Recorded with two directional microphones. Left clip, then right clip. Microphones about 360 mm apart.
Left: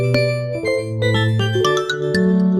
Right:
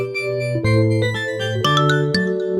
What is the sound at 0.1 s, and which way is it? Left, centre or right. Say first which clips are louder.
Music: left 3 dB; centre.